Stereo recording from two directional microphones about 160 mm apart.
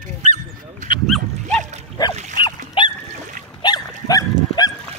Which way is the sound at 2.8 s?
30° left (ahead or behind).